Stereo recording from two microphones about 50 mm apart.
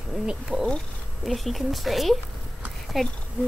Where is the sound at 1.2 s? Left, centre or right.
Centre.